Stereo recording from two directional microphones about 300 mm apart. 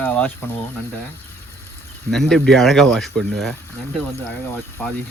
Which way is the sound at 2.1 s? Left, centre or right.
Centre.